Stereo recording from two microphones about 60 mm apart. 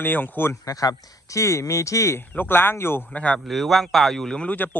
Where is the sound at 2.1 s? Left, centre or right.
Left.